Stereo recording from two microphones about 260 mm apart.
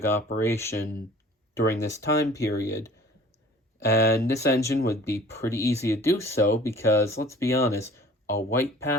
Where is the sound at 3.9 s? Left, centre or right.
Left.